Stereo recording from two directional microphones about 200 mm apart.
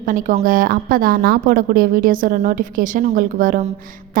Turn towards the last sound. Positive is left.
turn(degrees=-45)  # may be behind; listen again after turning